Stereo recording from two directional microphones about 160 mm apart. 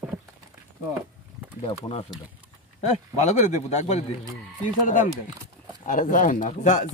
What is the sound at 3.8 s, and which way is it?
Speech, 45° left (ahead or behind).